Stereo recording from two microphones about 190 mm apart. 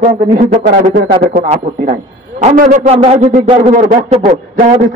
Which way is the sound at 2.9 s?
30° right (ahead or behind).